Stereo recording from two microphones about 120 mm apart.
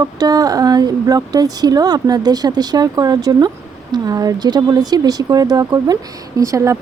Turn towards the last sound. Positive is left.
turn(degrees=-25)  # may be behind; listen again after turning